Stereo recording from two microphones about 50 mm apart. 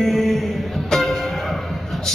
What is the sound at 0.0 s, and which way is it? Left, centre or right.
Music, centre.